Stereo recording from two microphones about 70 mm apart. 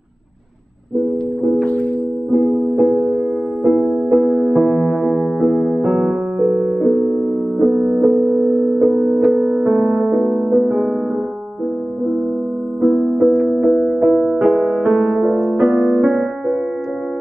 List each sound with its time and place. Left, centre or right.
1.6 s music: left
2.3 s music: centre
12.8 s music: centre